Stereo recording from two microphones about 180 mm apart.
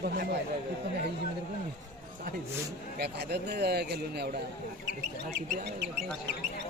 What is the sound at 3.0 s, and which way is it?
A man's voice, 65° right (ahead or behind).